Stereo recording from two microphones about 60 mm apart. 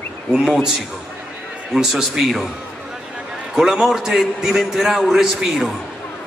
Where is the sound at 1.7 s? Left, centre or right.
Centre.